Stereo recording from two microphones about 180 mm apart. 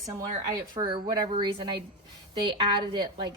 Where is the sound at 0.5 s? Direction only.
25° right (ahead or behind).